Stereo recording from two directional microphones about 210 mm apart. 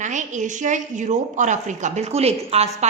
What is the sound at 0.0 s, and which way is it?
A woman's voice, 35° right (ahead or behind).